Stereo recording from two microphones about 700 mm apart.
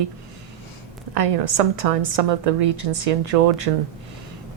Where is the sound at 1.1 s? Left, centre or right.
Right.